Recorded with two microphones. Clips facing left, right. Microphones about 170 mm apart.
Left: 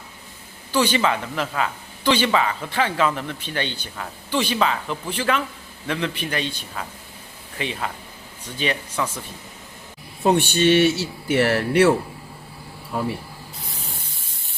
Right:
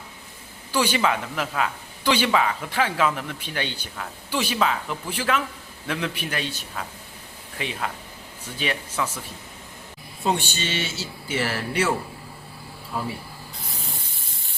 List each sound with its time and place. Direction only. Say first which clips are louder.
0.7 s speech: left 2 dB; 10° right (ahead or behind)
10.2 s speech: left 9 dB; 60° left (ahead or behind)